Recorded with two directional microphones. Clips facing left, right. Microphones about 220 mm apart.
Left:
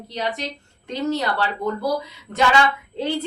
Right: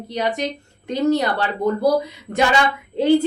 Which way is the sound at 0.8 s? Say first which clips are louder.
Right 5 dB; 15° right (ahead or behind).